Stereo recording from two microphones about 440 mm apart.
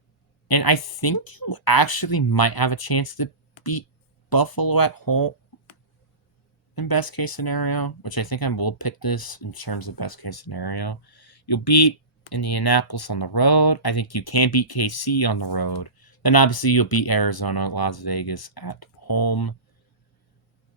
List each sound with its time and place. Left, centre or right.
0.4 s speech: left
6.7 s speech: left